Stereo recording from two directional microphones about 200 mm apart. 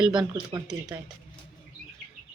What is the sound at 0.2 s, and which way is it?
Speech, 20° right (ahead or behind).